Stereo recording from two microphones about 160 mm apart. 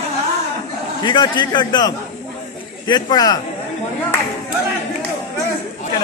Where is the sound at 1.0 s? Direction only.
30° left (ahead or behind).